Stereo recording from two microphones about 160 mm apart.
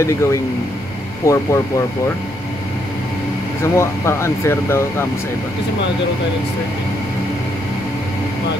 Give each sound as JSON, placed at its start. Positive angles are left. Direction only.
{"t": 0.0, "sound": "speech", "side_deg": 20}
{"t": 3.6, "sound": "speech", "side_deg": 15}